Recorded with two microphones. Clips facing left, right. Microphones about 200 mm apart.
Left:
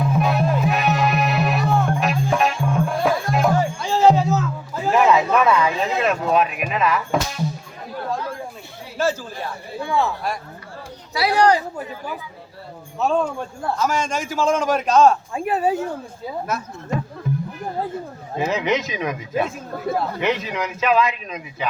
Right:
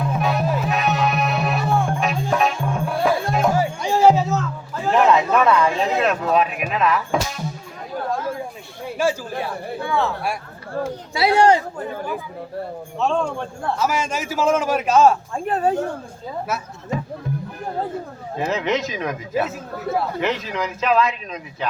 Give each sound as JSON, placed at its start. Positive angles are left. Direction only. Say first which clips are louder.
{"t": 0.0, "sound": "music", "louder": "left 2 dB", "side_deg": 0}
{"t": 4.7, "sound": "a sound", "louder": "even", "side_deg": 5}
{"t": 9.0, "sound": "speech", "louder": "right 1 dB", "side_deg": -10}
{"t": 11.1, "sound": "speech", "louder": "right 1 dB", "side_deg": -25}
{"t": 11.9, "sound": "speech", "louder": "right 4 dB", "side_deg": -50}
{"t": 13.0, "sound": "a man's voice", "louder": "left 1 dB", "side_deg": 5}
{"t": 13.7, "sound": "a man's voice", "louder": "left 1 dB", "side_deg": -10}
{"t": 15.4, "sound": "a man's voice", "louder": "even", "side_deg": 5}
{"t": 16.5, "sound": "a man's voice", "louder": "even", "side_deg": -5}
{"t": 17.3, "sound": "music", "louder": "left 3 dB", "side_deg": -55}
{"t": 18.3, "sound": "speech", "louder": "left 1 dB", "side_deg": 0}